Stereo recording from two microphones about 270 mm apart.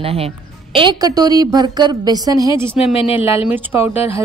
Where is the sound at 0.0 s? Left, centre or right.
Right.